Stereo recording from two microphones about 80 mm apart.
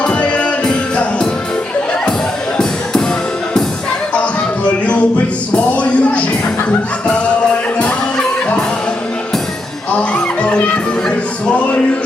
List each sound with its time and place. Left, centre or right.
0.0 s music: centre
5.7 s music: centre
9.9 s honk: centre